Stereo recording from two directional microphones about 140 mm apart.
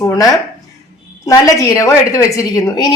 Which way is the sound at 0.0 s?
25° left (ahead or behind).